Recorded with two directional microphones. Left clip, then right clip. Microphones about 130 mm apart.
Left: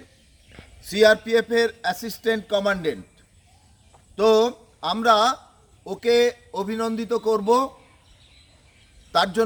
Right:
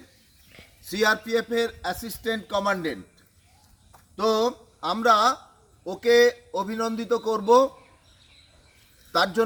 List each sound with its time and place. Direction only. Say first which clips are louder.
0.5 s a sound: left 2 dB; 50° left (ahead or behind)
0.9 s a man's voice: left 6 dB; 35° left (ahead or behind)
4.1 s a man's voice: left 5 dB; 35° left (ahead or behind)